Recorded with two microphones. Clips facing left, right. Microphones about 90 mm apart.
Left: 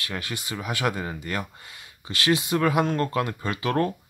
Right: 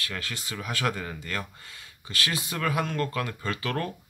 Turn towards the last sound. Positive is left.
turn(degrees=20)  # may be behind; listen again after turning